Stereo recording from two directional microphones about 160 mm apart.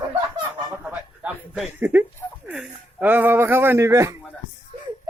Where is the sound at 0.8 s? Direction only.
5° right (ahead or behind).